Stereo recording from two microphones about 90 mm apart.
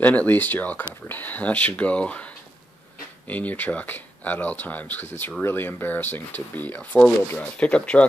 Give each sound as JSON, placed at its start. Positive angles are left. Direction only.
{"t": 0.0, "sound": "speech", "side_deg": 15}